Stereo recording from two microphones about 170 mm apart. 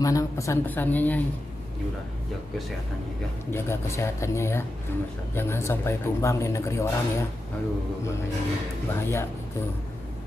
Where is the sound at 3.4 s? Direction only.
15° left (ahead or behind).